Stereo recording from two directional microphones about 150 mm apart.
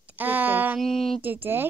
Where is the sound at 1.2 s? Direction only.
15° right (ahead or behind).